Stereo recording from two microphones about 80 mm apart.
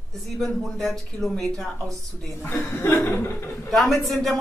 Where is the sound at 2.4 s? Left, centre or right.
Left.